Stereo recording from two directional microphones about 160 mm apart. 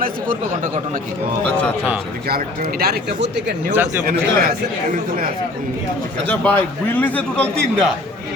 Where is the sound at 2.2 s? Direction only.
75° right (ahead or behind); by 3.5 s 90° right.